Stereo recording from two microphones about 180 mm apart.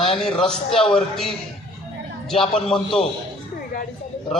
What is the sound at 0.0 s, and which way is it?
A man's voice, centre (ahead or behind).